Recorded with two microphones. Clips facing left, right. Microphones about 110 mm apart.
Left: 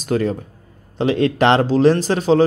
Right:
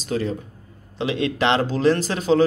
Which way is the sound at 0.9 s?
40° left (ahead or behind).